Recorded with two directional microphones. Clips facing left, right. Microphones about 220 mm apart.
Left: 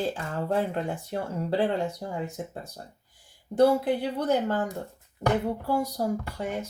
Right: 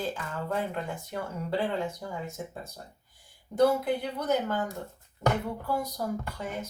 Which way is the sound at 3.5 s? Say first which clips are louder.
Left 3 dB; 30° left (ahead or behind).